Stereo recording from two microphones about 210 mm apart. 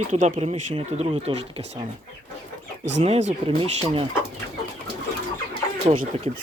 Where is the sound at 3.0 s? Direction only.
30° right (ahead or behind).